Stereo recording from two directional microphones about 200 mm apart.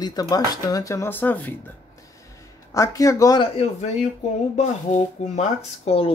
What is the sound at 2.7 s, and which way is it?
Speech, 15° left (ahead or behind).